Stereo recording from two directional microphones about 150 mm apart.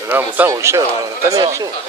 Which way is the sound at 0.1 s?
15° right (ahead or behind).